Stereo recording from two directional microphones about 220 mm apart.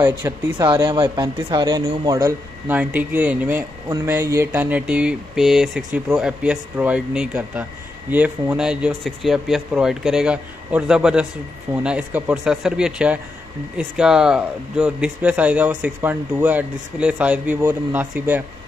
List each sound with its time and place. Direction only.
0.0 s speech: 10° right (ahead or behind)
0.7 s speech: 20° right (ahead or behind)
2.7 s speech: 5° right (ahead or behind)